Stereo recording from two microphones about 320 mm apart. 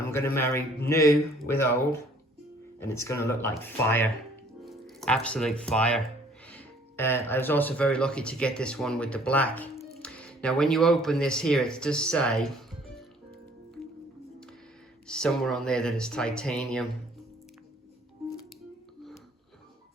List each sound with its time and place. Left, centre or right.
0.0 s a sound: centre
0.3 s speech: centre
15.0 s speech: centre